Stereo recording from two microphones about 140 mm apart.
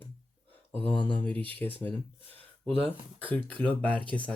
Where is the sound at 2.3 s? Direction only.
40° right (ahead or behind).